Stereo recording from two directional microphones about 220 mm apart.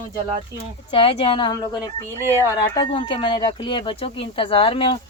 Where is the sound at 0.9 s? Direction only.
25° left (ahead or behind).